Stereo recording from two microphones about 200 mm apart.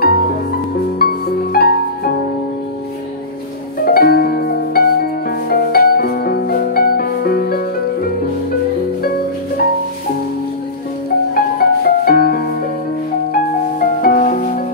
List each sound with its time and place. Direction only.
0.0 s music: 50° left (ahead or behind)
3.8 s music: 50° left (ahead or behind)
11.3 s music: 50° left (ahead or behind)